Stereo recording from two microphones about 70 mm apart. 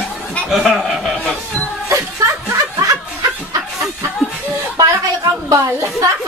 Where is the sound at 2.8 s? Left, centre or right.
Right.